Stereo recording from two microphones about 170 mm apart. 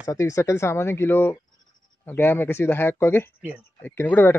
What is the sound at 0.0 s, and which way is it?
Speech, 20° left (ahead or behind).